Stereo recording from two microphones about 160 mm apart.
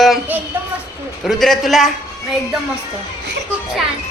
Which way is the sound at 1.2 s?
Centre (ahead or behind).